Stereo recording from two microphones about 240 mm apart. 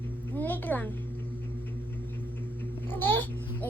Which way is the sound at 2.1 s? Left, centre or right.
Centre.